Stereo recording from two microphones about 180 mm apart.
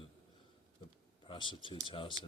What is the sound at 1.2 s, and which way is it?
Speech, 25° left (ahead or behind).